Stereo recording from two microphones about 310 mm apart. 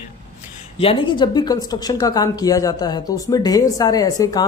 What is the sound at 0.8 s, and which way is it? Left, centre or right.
A woman's voice, centre.